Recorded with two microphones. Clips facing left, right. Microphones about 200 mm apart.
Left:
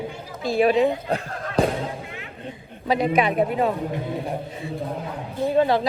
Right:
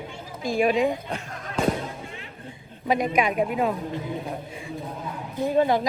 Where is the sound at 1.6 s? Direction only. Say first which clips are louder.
Left 3 dB; 35° left (ahead or behind).